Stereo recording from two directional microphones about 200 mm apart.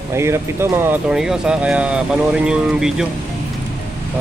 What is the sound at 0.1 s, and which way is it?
Speech, 15° right (ahead or behind).